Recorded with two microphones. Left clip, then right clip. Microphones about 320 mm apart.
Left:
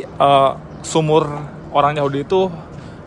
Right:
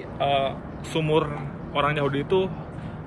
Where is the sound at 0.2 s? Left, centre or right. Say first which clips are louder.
Left 11 dB; left.